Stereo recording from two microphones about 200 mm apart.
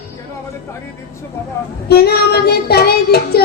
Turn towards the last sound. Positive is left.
turn(degrees=50)  # may be behind; listen again after turning